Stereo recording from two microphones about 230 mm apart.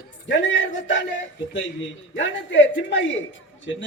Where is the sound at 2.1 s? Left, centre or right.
Left.